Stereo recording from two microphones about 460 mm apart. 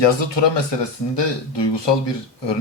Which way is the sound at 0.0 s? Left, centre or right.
Left.